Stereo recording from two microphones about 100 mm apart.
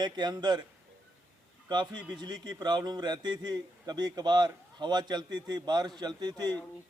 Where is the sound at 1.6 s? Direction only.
50° right (ahead or behind).